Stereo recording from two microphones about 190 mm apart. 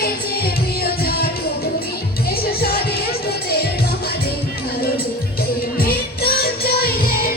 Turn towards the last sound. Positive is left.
turn(degrees=50)  # may be behind; listen again after turning